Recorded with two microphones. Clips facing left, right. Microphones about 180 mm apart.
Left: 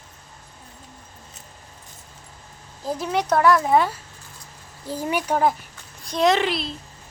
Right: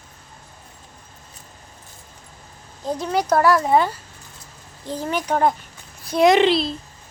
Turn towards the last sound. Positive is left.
turn(degrees=-30)  # may be behind; listen again after turning